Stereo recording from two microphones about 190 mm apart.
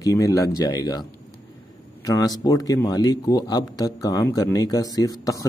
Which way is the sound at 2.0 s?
20° left (ahead or behind).